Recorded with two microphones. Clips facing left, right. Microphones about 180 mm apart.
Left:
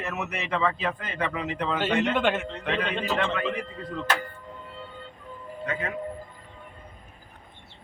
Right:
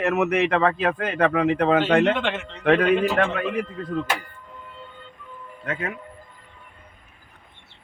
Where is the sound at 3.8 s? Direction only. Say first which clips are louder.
Right 6 dB; 55° right (ahead or behind).